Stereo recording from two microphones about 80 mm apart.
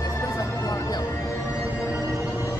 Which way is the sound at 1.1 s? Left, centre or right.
Left.